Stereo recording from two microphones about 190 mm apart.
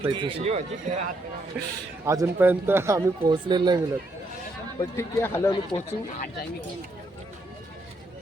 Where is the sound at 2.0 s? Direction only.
15° right (ahead or behind).